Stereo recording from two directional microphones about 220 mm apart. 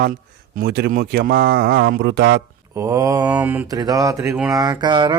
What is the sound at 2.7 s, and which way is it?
Mantra, 15° right (ahead or behind).